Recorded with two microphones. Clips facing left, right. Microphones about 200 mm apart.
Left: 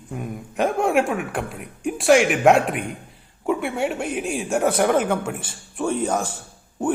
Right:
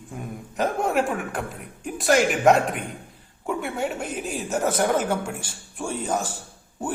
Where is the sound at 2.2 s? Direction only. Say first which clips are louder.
Left 2 dB; 5° left (ahead or behind).